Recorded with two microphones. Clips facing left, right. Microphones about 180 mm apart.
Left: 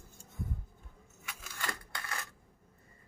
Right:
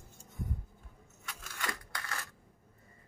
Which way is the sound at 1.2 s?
5° left (ahead or behind).